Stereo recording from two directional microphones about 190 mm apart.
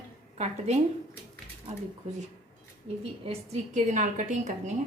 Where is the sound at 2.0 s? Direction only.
40° right (ahead or behind).